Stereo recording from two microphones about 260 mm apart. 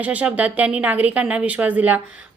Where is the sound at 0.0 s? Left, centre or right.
Centre.